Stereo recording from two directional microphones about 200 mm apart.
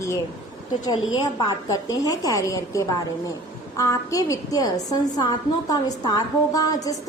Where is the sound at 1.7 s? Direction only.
15° left (ahead or behind).